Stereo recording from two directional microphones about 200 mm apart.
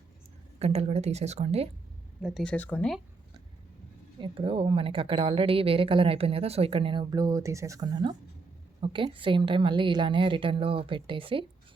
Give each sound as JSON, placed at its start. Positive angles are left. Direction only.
{"t": 0.6, "sound": "speech", "side_deg": -30}
{"t": 2.2, "sound": "speech", "side_deg": 5}
{"t": 4.2, "sound": "speech", "side_deg": -25}